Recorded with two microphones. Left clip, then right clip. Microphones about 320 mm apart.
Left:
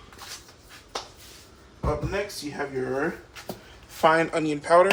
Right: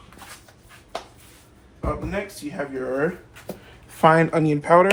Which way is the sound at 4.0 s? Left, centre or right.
Right.